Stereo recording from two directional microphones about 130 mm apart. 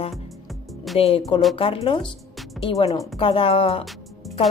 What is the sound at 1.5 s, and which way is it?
Speech, 45° left (ahead or behind).